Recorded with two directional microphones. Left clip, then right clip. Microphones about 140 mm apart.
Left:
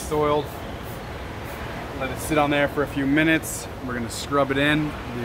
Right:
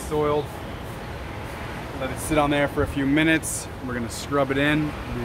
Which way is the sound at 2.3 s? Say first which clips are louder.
Left 1 dB; 30° right (ahead or behind).